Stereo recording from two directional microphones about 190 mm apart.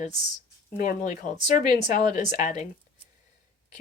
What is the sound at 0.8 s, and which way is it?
Speech, 45° left (ahead or behind).